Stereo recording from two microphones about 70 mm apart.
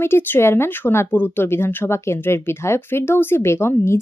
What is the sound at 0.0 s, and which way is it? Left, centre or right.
Speech, left.